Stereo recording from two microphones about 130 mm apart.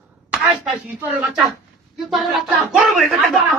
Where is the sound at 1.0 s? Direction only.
10° right (ahead or behind).